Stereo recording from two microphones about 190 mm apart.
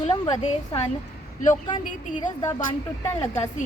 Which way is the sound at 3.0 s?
10° left (ahead or behind).